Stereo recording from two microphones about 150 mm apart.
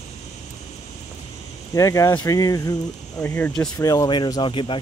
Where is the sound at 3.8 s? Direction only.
25° left (ahead or behind).